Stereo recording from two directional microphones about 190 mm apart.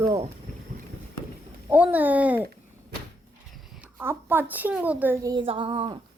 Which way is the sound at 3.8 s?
10° right (ahead or behind).